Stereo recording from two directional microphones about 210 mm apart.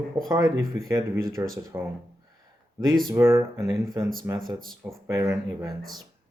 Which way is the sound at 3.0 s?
10° right (ahead or behind).